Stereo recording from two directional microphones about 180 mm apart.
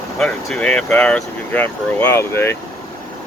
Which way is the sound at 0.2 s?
5° left (ahead or behind).